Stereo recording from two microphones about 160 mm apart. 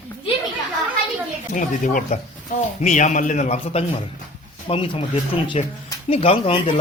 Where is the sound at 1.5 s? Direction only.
55° left (ahead or behind); by 6.7 s 35° left (ahead or behind).